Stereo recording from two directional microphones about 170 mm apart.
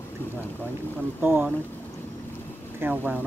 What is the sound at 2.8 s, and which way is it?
Speech, 10° right (ahead or behind).